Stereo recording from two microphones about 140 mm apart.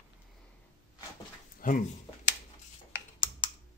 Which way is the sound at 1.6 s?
80° left.